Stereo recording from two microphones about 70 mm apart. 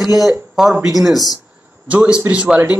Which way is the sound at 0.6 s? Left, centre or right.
Centre.